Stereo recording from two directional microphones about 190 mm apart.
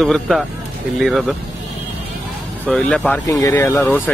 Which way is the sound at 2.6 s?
5° left (ahead or behind).